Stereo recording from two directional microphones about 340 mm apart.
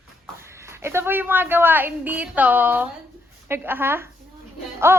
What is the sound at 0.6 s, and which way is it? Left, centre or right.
A woman's voice, centre.